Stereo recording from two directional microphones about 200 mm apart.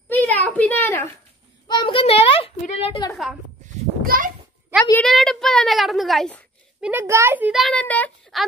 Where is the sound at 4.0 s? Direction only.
45° right (ahead or behind).